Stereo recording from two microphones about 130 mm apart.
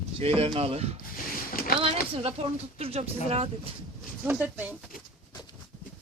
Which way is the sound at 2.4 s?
50° right (ahead or behind).